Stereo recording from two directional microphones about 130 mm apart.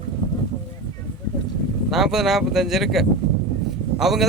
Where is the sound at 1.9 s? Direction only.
5° right (ahead or behind).